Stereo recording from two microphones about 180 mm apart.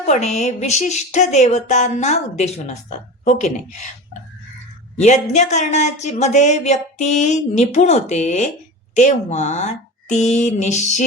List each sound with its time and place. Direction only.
0.0 s speech: 40° left (ahead or behind)
4.9 s speech: 40° left (ahead or behind)